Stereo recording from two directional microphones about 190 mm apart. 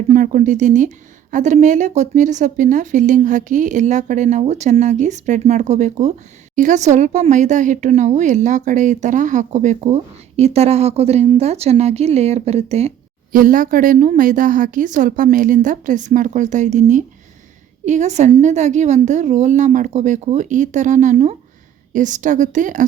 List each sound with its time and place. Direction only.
0.1 s speech: 40° right (ahead or behind)
13.3 s a woman's voice: 45° right (ahead or behind)